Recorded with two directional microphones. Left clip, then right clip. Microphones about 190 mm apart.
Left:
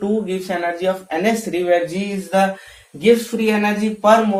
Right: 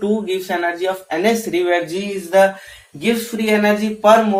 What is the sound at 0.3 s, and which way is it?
Speech, 10° left (ahead or behind).